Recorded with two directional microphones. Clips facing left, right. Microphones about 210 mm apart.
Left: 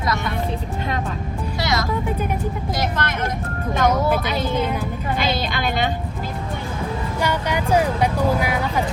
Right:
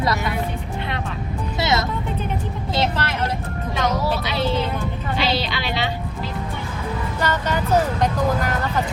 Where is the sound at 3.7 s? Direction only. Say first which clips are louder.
Left 4 dB; 50° left (ahead or behind).